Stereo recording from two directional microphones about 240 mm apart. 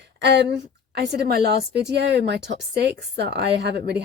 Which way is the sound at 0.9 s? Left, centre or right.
Right.